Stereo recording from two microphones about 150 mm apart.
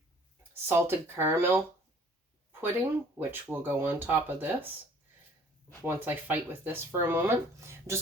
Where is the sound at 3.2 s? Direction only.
15° right (ahead or behind).